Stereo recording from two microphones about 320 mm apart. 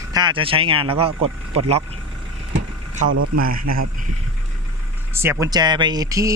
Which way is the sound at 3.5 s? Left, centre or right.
Right.